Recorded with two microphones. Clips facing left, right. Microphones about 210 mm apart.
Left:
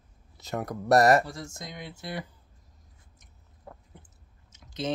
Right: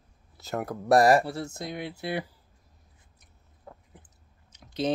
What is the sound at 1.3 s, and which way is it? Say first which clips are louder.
Speech: right 6 dB; 60° right (ahead or behind).